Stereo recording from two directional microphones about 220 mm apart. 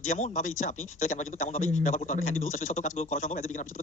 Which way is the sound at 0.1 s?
35° left (ahead or behind).